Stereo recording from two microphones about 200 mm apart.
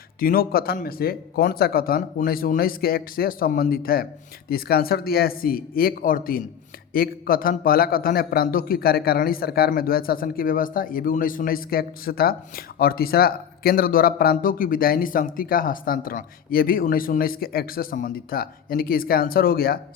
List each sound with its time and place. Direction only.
0.2 s a man's voice: 45° left (ahead or behind)